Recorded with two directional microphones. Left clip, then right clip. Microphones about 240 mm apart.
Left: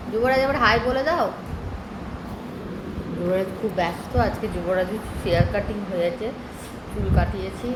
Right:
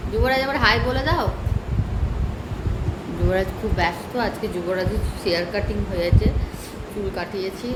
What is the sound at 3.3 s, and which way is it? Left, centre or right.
Speech, centre.